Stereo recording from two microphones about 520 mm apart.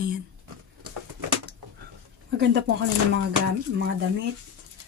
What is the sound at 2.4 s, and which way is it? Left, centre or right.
Speech, centre.